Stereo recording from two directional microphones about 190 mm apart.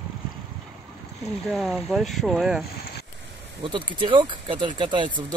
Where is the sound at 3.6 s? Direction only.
25° right (ahead or behind).